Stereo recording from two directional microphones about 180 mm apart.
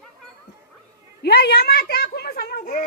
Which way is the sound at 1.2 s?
65° left (ahead or behind).